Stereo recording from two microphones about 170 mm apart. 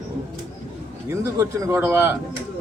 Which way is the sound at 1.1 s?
20° right (ahead or behind).